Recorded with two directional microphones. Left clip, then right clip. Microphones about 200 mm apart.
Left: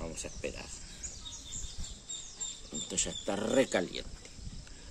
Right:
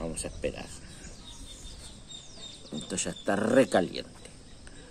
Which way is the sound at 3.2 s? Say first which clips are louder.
Right 6 dB; 15° right (ahead or behind).